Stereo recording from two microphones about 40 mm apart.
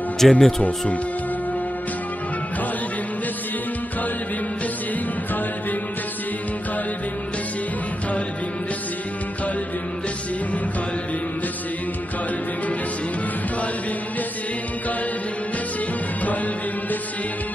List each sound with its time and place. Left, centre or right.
0.2 s speech: centre
0.6 s speech: left